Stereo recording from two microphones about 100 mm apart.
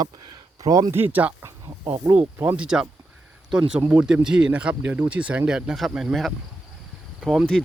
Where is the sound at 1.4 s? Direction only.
40° right (ahead or behind).